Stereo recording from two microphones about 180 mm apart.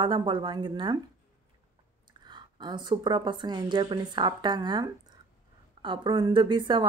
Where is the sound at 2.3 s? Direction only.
25° right (ahead or behind).